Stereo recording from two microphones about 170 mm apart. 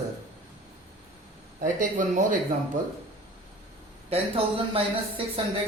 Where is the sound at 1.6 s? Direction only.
50° right (ahead or behind).